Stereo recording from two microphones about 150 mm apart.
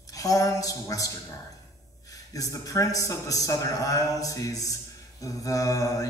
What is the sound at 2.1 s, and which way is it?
A man's voice, 25° left (ahead or behind).